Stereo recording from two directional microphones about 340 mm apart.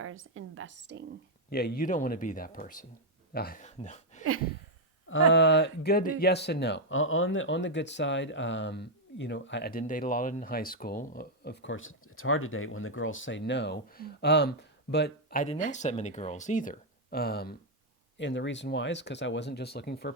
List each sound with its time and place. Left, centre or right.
0.0 s a woman's voice: right
1.5 s speech: left
5.0 s speech: left